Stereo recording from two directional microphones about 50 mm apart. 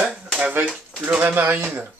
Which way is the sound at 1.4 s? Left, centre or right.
Right.